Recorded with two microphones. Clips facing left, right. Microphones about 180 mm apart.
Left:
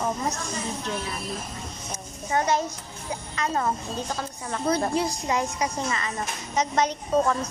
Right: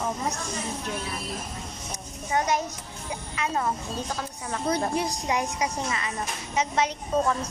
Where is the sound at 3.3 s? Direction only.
5° right (ahead or behind).